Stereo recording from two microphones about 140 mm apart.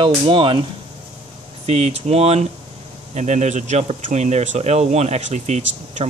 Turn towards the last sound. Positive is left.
turn(degrees=-55)  # may be behind; listen again after turning